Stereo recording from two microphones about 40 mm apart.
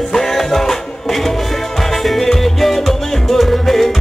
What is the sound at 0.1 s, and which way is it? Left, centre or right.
Music, centre.